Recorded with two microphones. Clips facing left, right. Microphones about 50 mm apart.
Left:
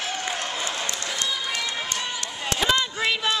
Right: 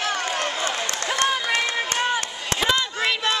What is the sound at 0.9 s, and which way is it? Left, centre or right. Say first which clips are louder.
Run: right 6 dB; right.